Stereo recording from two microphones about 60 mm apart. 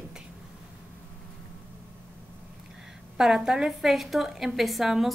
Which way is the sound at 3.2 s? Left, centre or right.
Centre.